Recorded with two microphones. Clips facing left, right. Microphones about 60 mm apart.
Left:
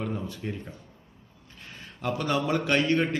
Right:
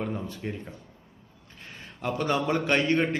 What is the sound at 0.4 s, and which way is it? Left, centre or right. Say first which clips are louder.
Speech: right 1 dB; centre.